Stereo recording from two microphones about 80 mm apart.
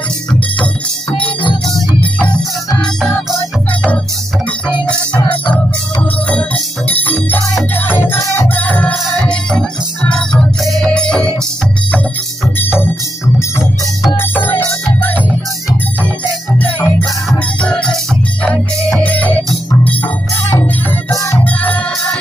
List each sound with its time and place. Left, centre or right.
1.1 s organ: centre
2.0 s music: centre
6.2 s music: centre
14.1 s music: left
16.5 s music: left
19.0 s music: centre
21.1 s music: left
21.5 s music: centre